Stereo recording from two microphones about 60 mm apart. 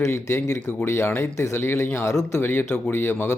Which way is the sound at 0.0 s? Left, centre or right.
Left.